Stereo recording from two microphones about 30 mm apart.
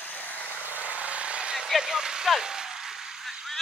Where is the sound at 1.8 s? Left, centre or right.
Right.